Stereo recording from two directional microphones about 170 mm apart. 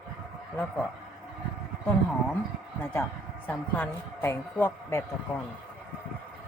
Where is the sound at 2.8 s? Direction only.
10° left (ahead or behind).